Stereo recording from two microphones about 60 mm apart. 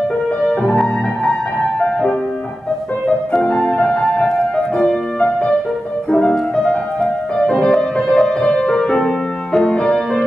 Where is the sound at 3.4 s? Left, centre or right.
Centre.